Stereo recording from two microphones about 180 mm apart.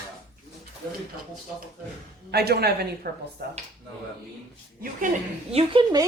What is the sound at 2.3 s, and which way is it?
A woman's voice, 60° right (ahead or behind).